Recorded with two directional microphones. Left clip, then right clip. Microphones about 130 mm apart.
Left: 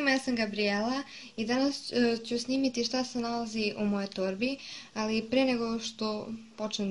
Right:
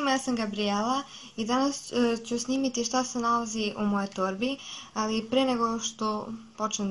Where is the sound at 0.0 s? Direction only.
20° left (ahead or behind).